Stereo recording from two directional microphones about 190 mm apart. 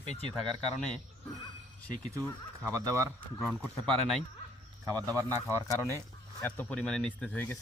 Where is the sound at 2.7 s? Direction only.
15° right (ahead or behind).